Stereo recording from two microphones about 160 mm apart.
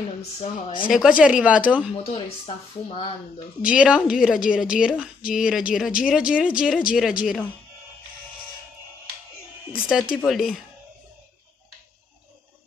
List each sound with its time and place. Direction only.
0.4 s speech: 30° left (ahead or behind)
0.9 s speech: 5° right (ahead or behind)
2.0 s speech: 40° left (ahead or behind)
3.6 s a woman's voice: 5° right (ahead or behind)
10.1 s a woman's voice: centre (ahead or behind)